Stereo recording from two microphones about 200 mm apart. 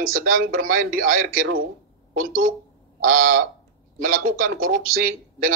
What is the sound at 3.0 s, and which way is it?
Speech, 40° right (ahead or behind).